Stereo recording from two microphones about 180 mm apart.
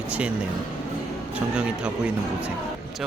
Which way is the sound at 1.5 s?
5° right (ahead or behind).